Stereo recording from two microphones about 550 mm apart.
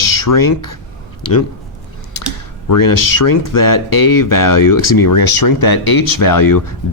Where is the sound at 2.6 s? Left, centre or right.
Left.